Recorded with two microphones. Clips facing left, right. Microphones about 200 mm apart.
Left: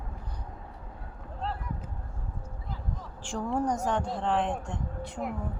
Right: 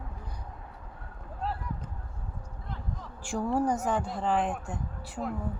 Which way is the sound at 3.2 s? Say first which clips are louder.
Right 2 dB; 10° right (ahead or behind).